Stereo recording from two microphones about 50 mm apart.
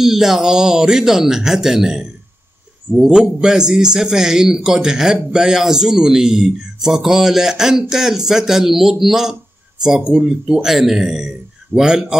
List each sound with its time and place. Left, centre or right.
0.0 s a man's voice: centre
9.9 s speech: centre
10.6 s a man's voice: centre